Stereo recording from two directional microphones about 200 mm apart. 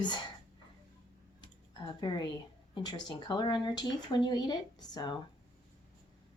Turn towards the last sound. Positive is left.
turn(degrees=20)  # may be behind; listen again after turning